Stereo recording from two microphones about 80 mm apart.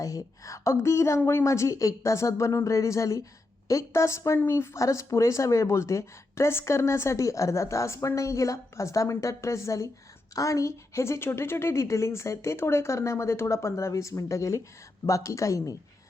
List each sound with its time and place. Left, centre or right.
0.0 s speech: left
1.2 s a woman's voice: left
1.5 s speech: left